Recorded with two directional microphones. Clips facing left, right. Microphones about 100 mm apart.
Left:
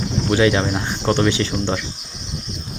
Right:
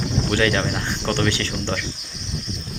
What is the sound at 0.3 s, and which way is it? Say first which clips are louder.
Speech: left 5 dB; 15° left (ahead or behind).